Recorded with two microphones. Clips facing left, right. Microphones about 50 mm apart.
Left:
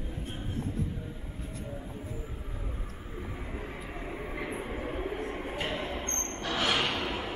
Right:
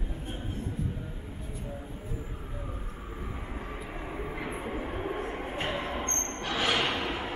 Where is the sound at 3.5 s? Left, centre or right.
Centre.